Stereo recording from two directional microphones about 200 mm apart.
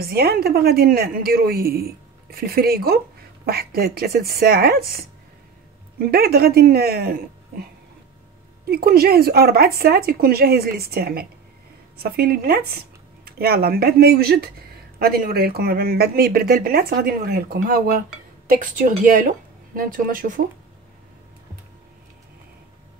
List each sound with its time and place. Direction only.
0.0 s a woman's voice: 50° right (ahead or behind)
8.6 s a woman's voice: 50° right (ahead or behind)